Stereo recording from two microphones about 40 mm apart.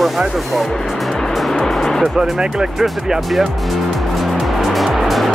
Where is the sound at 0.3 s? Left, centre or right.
Centre.